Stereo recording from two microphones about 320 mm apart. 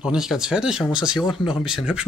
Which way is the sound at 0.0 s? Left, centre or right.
Centre.